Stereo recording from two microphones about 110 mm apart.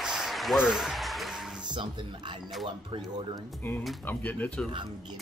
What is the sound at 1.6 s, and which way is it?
Speech, 45° right (ahead or behind).